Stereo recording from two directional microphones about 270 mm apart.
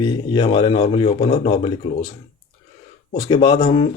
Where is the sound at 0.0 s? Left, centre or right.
Centre.